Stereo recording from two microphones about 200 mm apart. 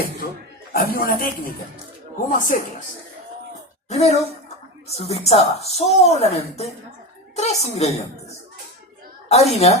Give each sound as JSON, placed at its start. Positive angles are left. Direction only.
{"t": 0.7, "sound": "a man's voice", "side_deg": 50}
{"t": 2.4, "sound": "a woman's voice", "side_deg": 40}
{"t": 3.8, "sound": "a woman's voice", "side_deg": 35}
{"t": 9.3, "sound": "a woman's voice", "side_deg": 30}